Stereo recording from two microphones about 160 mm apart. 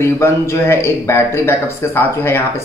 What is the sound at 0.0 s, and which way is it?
Speech, 15° left (ahead or behind).